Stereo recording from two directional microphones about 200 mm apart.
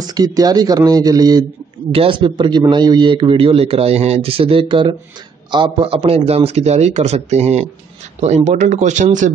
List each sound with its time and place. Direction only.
0.0 s a man's voice: 20° right (ahead or behind); by 9.3 s 40° right (ahead or behind)